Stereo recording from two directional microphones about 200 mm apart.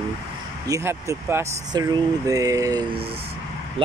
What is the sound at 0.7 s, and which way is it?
Speech, 15° right (ahead or behind).